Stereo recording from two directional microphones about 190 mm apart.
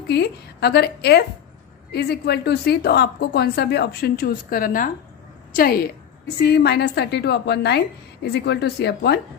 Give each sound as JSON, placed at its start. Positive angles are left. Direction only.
{"t": 0.1, "sound": "a woman's voice", "side_deg": 60}
{"t": 6.2, "sound": "a woman's voice", "side_deg": 60}